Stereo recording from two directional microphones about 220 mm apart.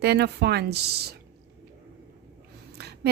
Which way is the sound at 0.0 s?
50° right (ahead or behind).